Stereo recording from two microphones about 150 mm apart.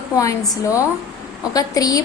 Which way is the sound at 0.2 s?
20° left (ahead or behind).